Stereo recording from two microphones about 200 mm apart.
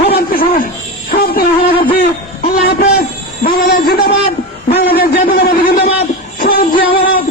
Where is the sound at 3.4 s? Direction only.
50° left (ahead or behind).